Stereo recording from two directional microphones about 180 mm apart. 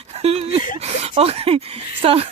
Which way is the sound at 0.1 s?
35° right (ahead or behind).